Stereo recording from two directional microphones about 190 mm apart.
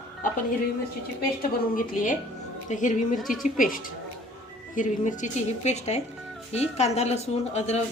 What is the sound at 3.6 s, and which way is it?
A woman's voice, 45° left (ahead or behind).